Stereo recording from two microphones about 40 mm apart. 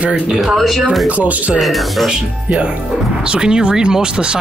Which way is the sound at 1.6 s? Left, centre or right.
Centre.